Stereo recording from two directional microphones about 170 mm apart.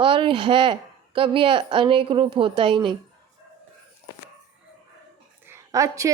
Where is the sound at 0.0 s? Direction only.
30° right (ahead or behind).